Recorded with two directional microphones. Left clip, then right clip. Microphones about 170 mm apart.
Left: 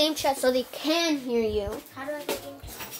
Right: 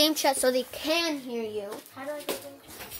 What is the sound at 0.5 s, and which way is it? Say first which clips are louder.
Speech: left 1 dB; 5° left (ahead or behind).